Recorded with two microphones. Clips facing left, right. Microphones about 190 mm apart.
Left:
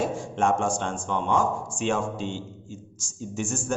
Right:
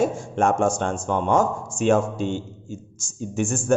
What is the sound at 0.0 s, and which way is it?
A man's voice, 45° right (ahead or behind).